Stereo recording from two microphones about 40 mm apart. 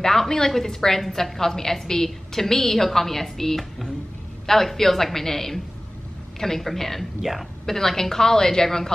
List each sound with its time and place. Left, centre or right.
0.0 s a woman's voice: centre
7.6 s a woman's voice: centre